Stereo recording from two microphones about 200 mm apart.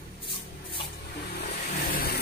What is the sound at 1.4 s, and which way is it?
Vehicle, 50° left (ahead or behind).